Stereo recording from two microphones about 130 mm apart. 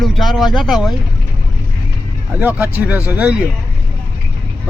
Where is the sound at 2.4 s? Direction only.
10° right (ahead or behind).